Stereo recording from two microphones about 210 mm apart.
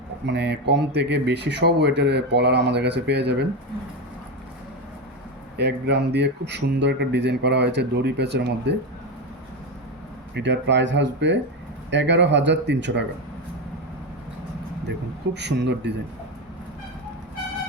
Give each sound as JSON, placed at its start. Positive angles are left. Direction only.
{"t": 0.3, "sound": "speech", "side_deg": -55}
{"t": 5.5, "sound": "speech", "side_deg": -50}
{"t": 10.3, "sound": "speech", "side_deg": -55}
{"t": 14.8, "sound": "speech", "side_deg": -55}